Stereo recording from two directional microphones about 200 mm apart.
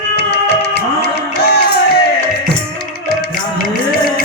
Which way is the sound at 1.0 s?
55° left (ahead or behind).